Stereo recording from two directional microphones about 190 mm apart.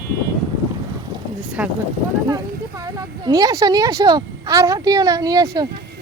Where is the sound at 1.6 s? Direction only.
10° right (ahead or behind).